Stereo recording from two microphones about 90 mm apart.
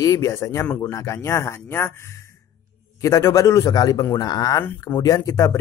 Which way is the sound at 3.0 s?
35° left (ahead or behind).